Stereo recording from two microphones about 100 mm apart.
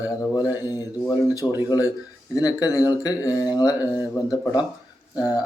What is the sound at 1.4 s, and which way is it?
Speech, 25° left (ahead or behind).